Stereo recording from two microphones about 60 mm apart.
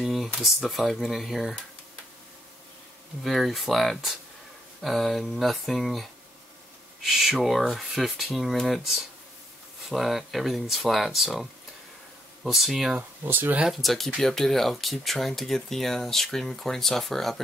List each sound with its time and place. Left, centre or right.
0.0 s a sound: centre
0.4 s speech: centre
3.3 s speech: centre
12.4 s speech: centre
13.2 s speech: right
13.7 s speech: centre